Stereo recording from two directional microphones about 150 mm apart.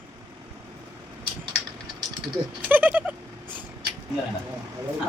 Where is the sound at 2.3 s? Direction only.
10° right (ahead or behind).